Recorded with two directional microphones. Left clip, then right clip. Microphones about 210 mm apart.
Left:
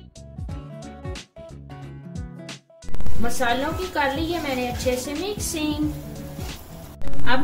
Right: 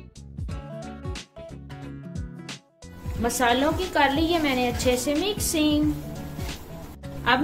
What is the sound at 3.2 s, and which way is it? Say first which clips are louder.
A woman's voice: right 1 dB; 45° right (ahead or behind).